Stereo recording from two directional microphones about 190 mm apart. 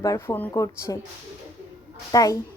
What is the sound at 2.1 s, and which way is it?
Speech, 20° left (ahead or behind).